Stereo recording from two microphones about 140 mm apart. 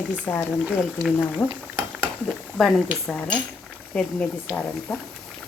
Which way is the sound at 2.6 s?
5° left (ahead or behind).